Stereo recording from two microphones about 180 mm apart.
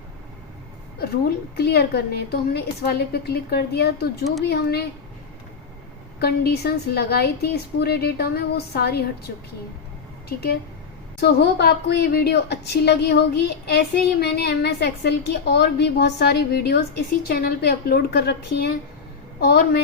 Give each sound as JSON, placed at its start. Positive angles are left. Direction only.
{"t": 1.5, "sound": "a woman's voice", "side_deg": 60}
{"t": 6.1, "sound": "a woman's voice", "side_deg": 60}
{"t": 10.2, "sound": "a woman's voice", "side_deg": 60}